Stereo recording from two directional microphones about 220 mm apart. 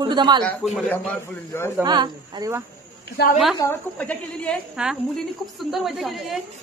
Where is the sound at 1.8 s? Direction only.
20° right (ahead or behind).